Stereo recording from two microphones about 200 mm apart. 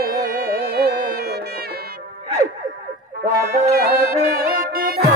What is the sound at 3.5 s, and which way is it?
Music, 50° right (ahead or behind).